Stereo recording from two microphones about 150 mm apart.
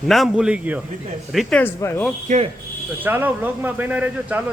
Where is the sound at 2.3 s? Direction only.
60° right (ahead or behind).